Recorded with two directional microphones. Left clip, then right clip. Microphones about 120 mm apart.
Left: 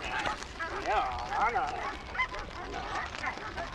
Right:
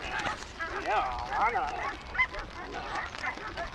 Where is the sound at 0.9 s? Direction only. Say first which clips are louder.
Right 1 dB; 10° right (ahead or behind).